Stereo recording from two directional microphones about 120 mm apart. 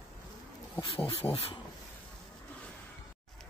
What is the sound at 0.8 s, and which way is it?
Speech, 55° left (ahead or behind).